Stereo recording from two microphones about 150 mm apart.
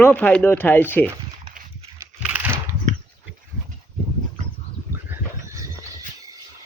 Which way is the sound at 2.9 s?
50° right (ahead or behind).